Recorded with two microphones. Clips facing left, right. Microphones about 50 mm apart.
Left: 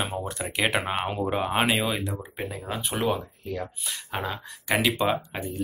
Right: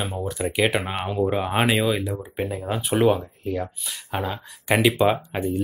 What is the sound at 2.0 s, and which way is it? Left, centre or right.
Speech, centre.